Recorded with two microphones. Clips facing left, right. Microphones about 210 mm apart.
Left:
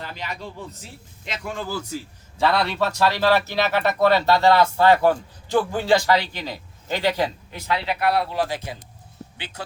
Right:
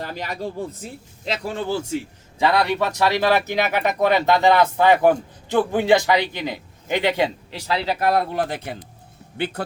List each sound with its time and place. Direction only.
0.0 s speech: 45° right (ahead or behind)
2.4 s speech: 15° right (ahead or behind)
7.7 s speech: 40° right (ahead or behind); by 9.6 s 60° right (ahead or behind)